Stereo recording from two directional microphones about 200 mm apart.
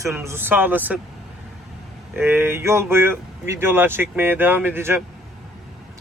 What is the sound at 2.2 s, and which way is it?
Speech, 10° right (ahead or behind).